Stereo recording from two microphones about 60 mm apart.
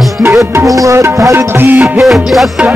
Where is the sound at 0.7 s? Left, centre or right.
Right.